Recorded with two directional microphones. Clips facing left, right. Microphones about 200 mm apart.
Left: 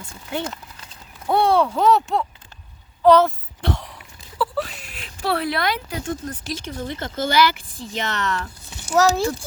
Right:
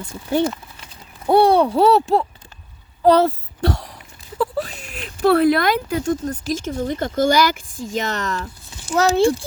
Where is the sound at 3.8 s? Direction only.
40° right (ahead or behind).